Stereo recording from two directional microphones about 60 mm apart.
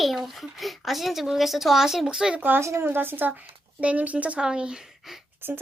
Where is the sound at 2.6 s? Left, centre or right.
Right.